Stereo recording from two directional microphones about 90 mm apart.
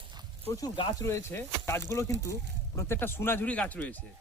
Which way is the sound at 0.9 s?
30° left (ahead or behind).